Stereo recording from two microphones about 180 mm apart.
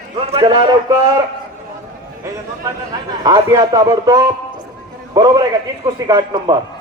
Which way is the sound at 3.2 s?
20° right (ahead or behind).